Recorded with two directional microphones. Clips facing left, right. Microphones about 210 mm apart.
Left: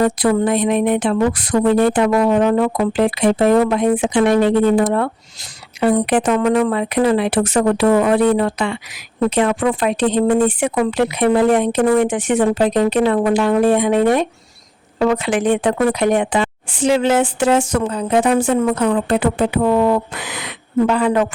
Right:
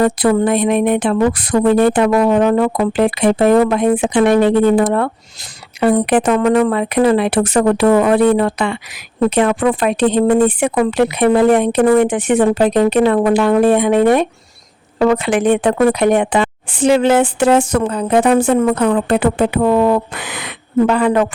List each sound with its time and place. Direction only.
0.0 s speech: 55° right (ahead or behind)